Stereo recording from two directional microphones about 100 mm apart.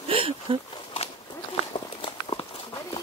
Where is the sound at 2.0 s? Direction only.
55° left (ahead or behind).